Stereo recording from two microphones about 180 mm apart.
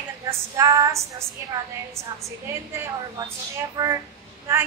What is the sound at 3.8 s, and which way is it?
Speech, 20° right (ahead or behind).